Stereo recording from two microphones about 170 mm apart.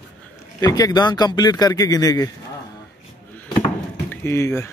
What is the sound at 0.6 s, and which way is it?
Speech, 20° left (ahead or behind).